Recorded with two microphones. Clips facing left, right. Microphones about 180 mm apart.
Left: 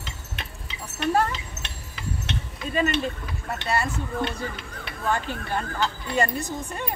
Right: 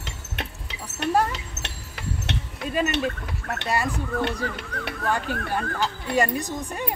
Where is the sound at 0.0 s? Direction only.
65° right (ahead or behind).